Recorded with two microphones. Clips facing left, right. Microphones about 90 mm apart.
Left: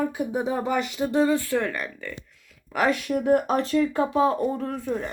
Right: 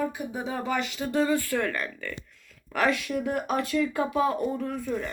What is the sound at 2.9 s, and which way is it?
Speech, 35° left (ahead or behind).